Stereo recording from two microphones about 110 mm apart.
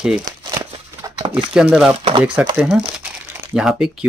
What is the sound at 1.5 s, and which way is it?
Speech, 10° right (ahead or behind).